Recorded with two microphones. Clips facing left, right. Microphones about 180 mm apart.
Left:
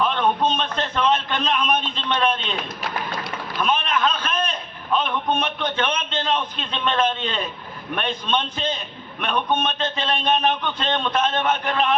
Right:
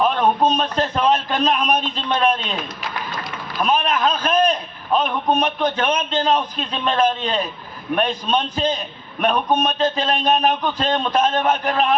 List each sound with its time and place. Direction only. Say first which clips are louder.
0.0 s a man's voice: right 3 dB; 40° right (ahead or behind)
3.6 s a sound: right 3 dB; 40° right (ahead or behind)
4.9 s a man's voice: right 4 dB; 40° right (ahead or behind)